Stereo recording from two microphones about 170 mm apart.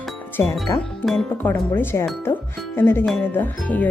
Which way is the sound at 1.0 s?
Centre (ahead or behind).